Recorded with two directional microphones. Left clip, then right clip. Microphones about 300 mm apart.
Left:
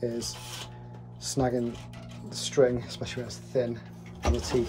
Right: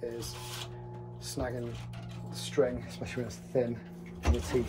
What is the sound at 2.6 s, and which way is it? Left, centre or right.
Speech, left.